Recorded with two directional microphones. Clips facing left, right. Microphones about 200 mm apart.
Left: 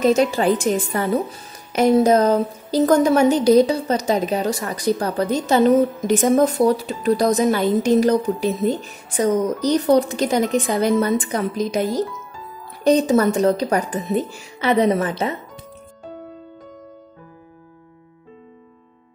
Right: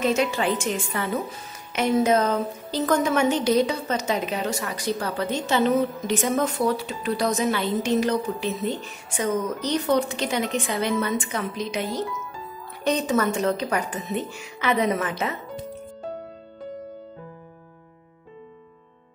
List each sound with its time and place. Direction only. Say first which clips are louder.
0.0 s a woman's voice: left 6 dB; 35° left (ahead or behind)